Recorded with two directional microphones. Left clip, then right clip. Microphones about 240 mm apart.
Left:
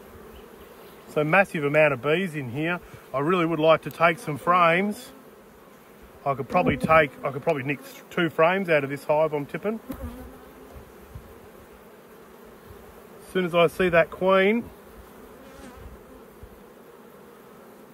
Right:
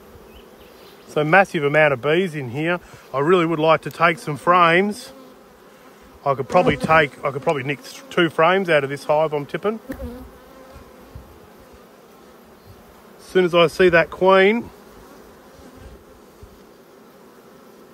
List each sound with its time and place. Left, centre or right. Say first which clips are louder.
1.1 s speech: right 5 dB; right
6.2 s speech: right 6 dB; right
13.3 s speech: right 6 dB; right